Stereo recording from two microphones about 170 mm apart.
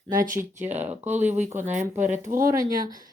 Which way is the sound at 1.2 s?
10° right (ahead or behind).